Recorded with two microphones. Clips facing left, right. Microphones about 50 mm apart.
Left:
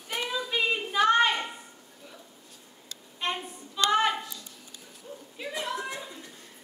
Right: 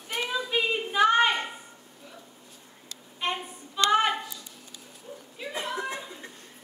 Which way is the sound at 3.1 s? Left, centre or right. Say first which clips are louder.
Right 1 dB; centre.